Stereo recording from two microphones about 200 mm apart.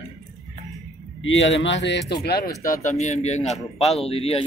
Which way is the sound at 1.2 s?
70° left (ahead or behind).